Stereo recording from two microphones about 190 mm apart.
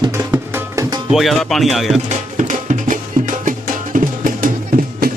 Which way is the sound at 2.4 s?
40° right (ahead or behind).